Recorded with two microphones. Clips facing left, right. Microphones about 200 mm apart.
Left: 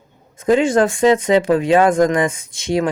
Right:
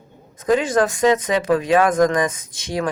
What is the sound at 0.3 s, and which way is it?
Speech, 25° left (ahead or behind).